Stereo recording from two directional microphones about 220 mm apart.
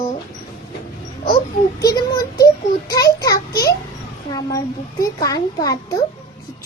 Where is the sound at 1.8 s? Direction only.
15° left (ahead or behind).